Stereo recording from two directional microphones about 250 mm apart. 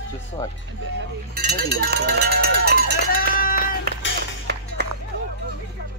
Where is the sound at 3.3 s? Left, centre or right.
Left.